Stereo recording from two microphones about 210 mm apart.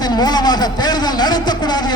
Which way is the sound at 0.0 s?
20° left (ahead or behind).